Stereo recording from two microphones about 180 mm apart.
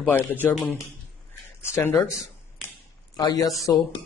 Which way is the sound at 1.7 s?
10° left (ahead or behind).